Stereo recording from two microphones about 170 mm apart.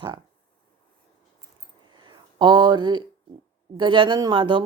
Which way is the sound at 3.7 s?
30° right (ahead or behind).